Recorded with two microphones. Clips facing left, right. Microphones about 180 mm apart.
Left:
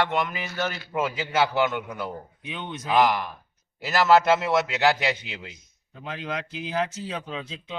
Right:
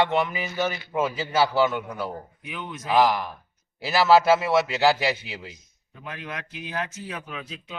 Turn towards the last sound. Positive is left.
turn(degrees=25)  # may be behind; listen again after turning